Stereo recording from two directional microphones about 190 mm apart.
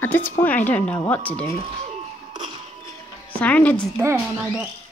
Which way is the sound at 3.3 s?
10° left (ahead or behind).